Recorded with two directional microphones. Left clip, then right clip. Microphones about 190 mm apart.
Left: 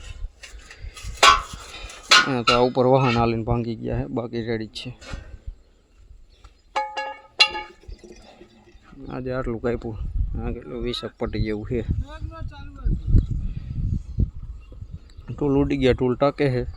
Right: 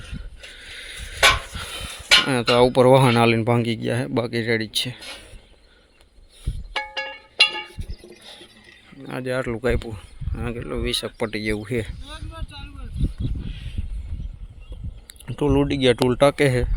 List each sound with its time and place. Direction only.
2.2 s speech: 5° right (ahead or behind)
4.9 s speech: 50° left (ahead or behind)
6.7 s music: 45° left (ahead or behind)
9.0 s speech: centre (ahead or behind)
12.0 s a sound: 40° left (ahead or behind)
13.5 s a sound: 5° left (ahead or behind)
15.3 s speech: centre (ahead or behind)
16.0 s speech: 5° right (ahead or behind)